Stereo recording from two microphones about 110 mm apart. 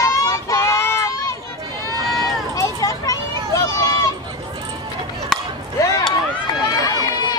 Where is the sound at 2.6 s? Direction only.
30° left (ahead or behind).